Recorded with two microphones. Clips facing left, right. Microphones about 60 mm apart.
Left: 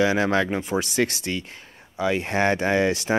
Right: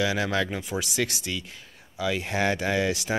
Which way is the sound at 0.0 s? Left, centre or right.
Left.